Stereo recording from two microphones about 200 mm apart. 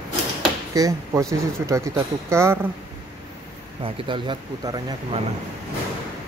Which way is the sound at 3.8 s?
25° right (ahead or behind).